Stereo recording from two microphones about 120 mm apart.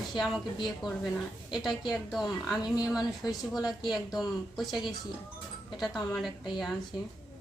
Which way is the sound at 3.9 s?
Centre (ahead or behind).